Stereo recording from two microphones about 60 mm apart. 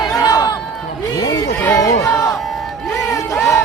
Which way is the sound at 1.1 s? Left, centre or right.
Left.